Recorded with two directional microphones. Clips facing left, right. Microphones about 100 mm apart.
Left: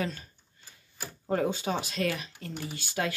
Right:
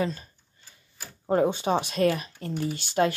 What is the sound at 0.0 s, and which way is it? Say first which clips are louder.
Speech: right 5 dB; 35° right (ahead or behind).